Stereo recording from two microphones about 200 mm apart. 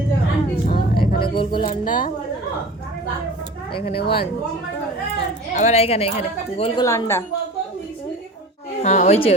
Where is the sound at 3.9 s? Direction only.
25° left (ahead or behind).